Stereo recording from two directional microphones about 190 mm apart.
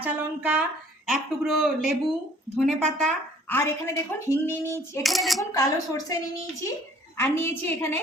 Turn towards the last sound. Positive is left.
turn(degrees=15)  # may be behind; listen again after turning